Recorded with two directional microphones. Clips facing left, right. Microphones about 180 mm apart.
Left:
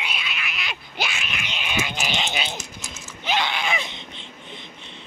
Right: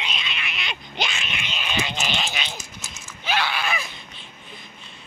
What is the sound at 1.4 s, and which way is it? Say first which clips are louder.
Goat: even; 15° left (ahead or behind).